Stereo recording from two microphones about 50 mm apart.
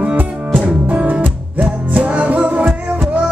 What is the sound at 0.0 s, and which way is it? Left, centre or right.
Music, right.